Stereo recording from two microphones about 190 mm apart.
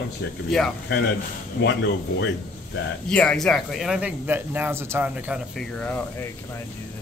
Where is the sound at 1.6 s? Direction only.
65° left (ahead or behind).